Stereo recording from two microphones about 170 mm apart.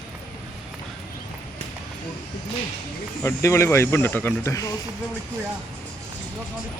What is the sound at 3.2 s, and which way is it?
Speech, 15° left (ahead or behind).